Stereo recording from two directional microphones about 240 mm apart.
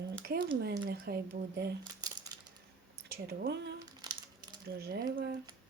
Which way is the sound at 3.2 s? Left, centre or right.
Right.